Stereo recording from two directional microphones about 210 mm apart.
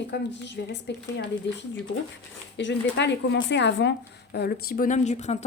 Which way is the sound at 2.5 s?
55° left (ahead or behind).